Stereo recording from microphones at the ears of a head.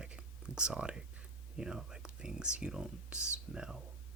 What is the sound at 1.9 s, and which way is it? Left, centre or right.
Speech, centre.